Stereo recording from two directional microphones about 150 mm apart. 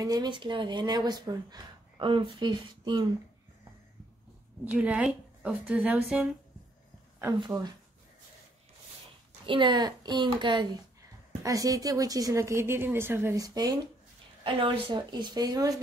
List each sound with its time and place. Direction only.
0.0 s speech: 25° right (ahead or behind)
4.6 s a woman's voice: 10° right (ahead or behind)
7.3 s speech: 30° right (ahead or behind)
9.5 s speech: 30° right (ahead or behind)